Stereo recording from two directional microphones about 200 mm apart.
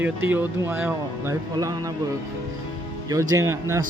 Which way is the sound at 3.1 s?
15° right (ahead or behind).